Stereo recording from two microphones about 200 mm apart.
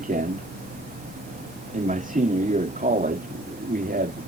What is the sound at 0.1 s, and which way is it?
Speech, 45° right (ahead or behind).